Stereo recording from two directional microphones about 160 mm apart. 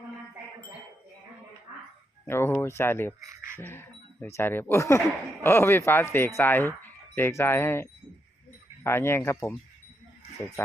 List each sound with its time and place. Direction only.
2.2 s speech: 15° left (ahead or behind)
3.2 s speech: 15° right (ahead or behind)
3.6 s speech: 15° left (ahead or behind)